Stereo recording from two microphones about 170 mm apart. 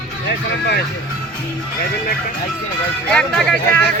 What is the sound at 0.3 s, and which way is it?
Speech, 75° left (ahead or behind).